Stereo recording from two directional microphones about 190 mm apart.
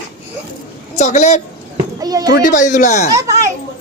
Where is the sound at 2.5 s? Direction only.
40° left (ahead or behind).